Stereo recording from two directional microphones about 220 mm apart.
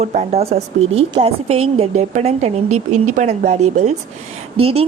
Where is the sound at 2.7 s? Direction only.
90° right.